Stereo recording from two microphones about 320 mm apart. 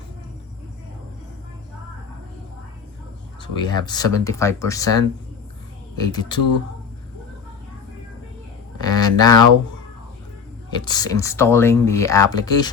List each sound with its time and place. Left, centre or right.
3.6 s speech: centre
8.8 s a sound: centre
10.7 s speech: centre